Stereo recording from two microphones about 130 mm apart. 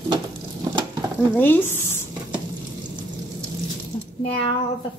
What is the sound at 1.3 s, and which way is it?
Speech, 15° left (ahead or behind).